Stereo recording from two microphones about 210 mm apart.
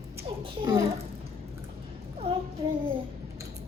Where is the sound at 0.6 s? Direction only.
15° right (ahead or behind).